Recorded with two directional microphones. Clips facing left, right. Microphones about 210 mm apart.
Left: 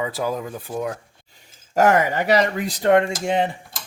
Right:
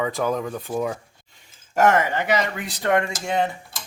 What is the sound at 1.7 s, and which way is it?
Speech, 35° left (ahead or behind).